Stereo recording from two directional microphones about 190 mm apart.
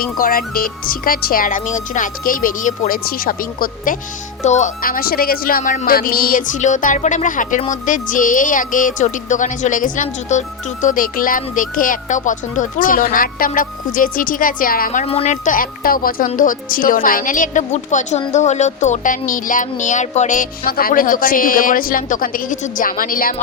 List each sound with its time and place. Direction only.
0.0 s speech: 50° left (ahead or behind)